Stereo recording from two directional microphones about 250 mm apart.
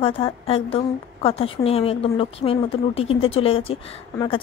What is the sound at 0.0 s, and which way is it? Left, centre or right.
A woman's voice, left.